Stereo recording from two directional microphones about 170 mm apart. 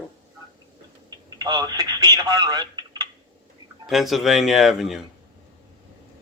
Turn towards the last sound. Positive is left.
turn(degrees=0)  # may be behind; listen again after turning